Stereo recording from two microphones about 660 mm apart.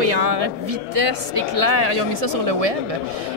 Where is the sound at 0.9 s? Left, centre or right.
Right.